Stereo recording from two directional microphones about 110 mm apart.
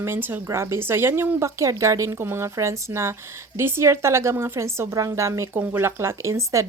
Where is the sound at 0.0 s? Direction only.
20° right (ahead or behind).